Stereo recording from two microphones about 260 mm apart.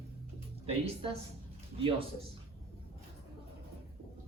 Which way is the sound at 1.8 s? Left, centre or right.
Centre.